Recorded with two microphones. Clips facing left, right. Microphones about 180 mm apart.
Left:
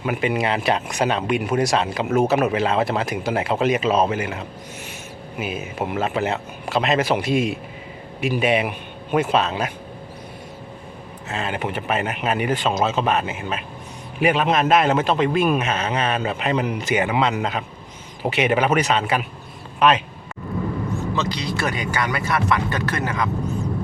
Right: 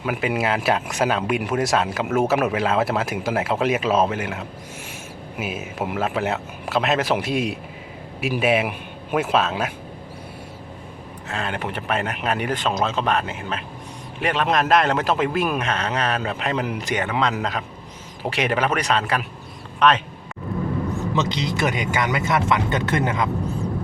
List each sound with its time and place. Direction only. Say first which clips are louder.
0.0 s speech: left 1 dB; 5° right (ahead or behind)
11.3 s speech: left 2 dB; 5° left (ahead or behind)
21.2 s speech: right 4 dB; 20° right (ahead or behind)